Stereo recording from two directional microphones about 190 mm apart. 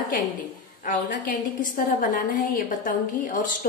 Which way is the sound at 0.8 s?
45° left (ahead or behind).